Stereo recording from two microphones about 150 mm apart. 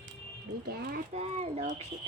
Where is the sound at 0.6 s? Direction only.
85° right.